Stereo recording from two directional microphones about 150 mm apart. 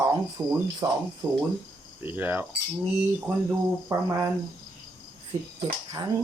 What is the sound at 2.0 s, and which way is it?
Speech, 15° right (ahead or behind).